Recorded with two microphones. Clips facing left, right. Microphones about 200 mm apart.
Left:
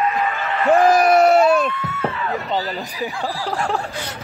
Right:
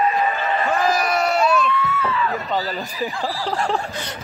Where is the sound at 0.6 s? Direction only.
55° left (ahead or behind).